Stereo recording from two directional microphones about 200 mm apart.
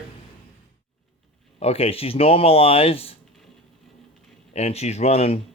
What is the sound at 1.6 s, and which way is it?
Speech, 30° left (ahead or behind).